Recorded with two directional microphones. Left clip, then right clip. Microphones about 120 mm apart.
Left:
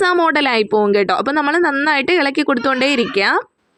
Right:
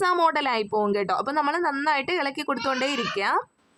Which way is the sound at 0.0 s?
30° left (ahead or behind).